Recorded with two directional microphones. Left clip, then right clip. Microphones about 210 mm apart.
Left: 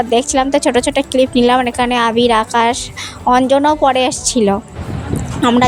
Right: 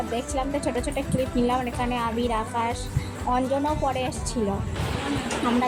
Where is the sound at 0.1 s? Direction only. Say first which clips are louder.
Left 14 dB; 50° left (ahead or behind).